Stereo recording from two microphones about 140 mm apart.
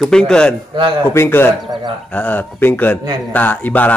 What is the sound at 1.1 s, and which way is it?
A man's voice, 15° left (ahead or behind).